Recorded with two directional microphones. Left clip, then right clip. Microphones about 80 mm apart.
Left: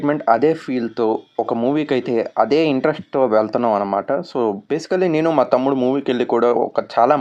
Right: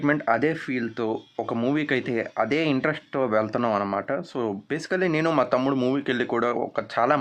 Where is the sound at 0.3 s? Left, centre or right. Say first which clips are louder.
Left 8 dB; left.